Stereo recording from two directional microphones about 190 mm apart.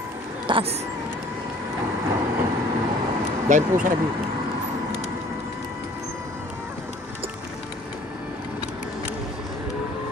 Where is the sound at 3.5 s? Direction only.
40° right (ahead or behind).